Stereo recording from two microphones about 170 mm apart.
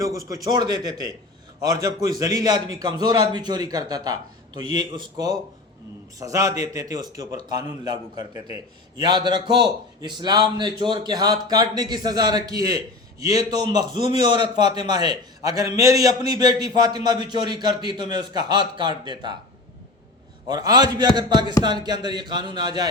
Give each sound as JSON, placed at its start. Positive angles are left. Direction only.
{"t": 0.0, "sound": "speech", "side_deg": -20}
{"t": 20.5, "sound": "speech", "side_deg": -20}